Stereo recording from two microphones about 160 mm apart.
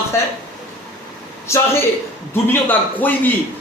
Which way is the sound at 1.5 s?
15° left (ahead or behind).